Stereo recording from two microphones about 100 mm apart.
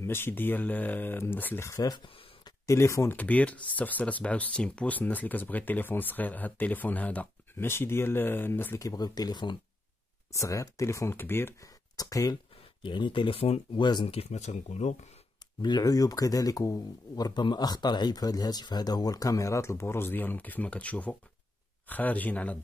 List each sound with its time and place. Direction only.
0.0 s speech: 25° left (ahead or behind)
1.7 s speech: 35° left (ahead or behind)
3.2 s speech: 15° left (ahead or behind)
8.7 s speech: 35° left (ahead or behind)
10.3 s speech: 35° left (ahead or behind)
12.0 s speech: 35° left (ahead or behind)
12.8 s speech: 50° left (ahead or behind)
13.7 s speech: 45° left (ahead or behind)
14.0 s speech: 80° left
15.6 s speech: 40° left (ahead or behind); by 22.6 s 15° left (ahead or behind)